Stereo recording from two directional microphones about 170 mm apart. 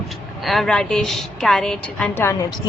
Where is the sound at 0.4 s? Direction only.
Centre (ahead or behind).